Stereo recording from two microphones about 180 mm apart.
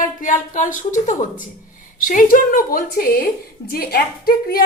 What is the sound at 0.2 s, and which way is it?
A woman's voice, 45° left (ahead or behind).